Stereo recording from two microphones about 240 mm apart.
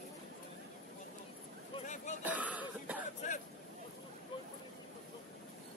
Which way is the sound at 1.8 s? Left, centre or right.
Left.